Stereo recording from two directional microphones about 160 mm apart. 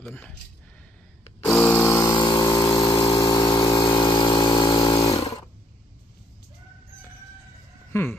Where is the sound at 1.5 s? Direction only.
15° left (ahead or behind); by 2.4 s 30° left (ahead or behind).